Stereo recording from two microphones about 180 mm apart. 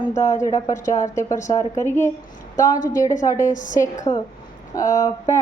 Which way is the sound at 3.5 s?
45° left (ahead or behind).